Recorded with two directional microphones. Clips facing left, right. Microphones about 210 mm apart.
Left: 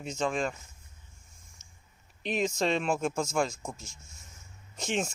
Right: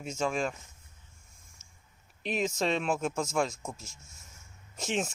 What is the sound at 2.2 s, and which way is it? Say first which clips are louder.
Speech: left 1 dB; 5° right (ahead or behind).